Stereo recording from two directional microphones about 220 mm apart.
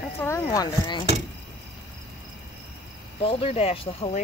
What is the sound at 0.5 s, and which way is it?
Speech, 20° left (ahead or behind).